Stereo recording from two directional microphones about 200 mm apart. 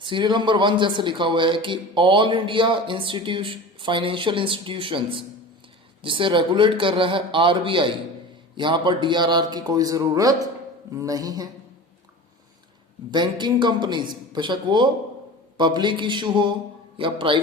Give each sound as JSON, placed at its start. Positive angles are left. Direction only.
{"t": 0.0, "sound": "a man's voice", "side_deg": -25}
{"t": 13.1, "sound": "a man's voice", "side_deg": -20}